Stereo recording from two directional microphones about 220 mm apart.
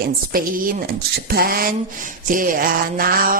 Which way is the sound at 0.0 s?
40° right (ahead or behind).